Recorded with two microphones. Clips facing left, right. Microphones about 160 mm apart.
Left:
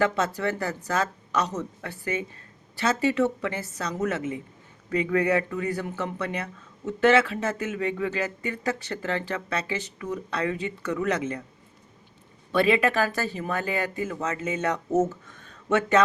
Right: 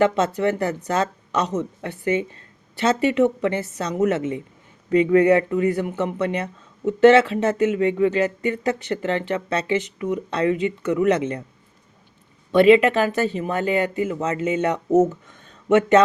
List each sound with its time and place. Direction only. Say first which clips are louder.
0.0 s speech: right 6 dB; 25° right (ahead or behind)
12.5 s speech: right 8 dB; 25° right (ahead or behind)